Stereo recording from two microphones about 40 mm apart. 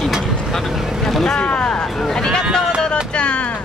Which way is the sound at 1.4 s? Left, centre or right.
Left.